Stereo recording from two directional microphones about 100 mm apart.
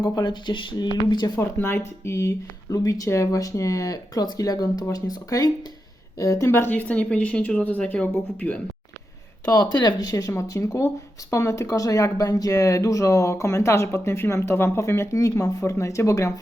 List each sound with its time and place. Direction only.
0.0 s speech: 45° left (ahead or behind)
1.5 s speech: 20° left (ahead or behind)
9.5 s speech: 45° left (ahead or behind)